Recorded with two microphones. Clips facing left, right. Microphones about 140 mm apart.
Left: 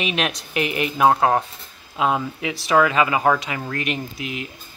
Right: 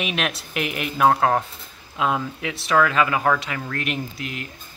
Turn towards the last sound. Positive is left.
turn(degrees=5)  # may be behind; listen again after turning